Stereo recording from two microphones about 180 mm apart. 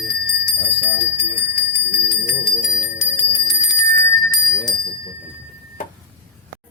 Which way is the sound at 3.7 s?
20° left (ahead or behind).